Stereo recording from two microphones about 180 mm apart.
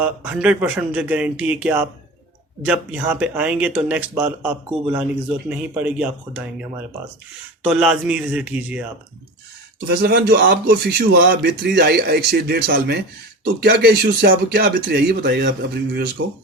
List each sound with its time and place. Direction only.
0.0 s speech: 10° right (ahead or behind)
9.8 s a man's voice: 60° right (ahead or behind)